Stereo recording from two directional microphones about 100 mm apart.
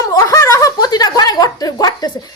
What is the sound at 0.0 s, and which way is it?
Snicker, 30° left (ahead or behind).